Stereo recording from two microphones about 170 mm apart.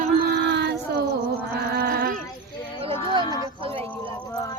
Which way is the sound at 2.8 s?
30° right (ahead or behind).